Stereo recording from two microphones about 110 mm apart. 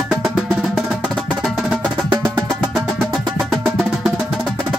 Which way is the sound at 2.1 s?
40° right (ahead or behind).